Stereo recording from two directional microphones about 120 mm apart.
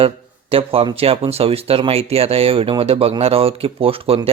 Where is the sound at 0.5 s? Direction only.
50° right (ahead or behind).